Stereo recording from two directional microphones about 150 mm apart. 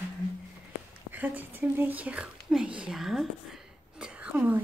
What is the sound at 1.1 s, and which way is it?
Speech, 10° right (ahead or behind).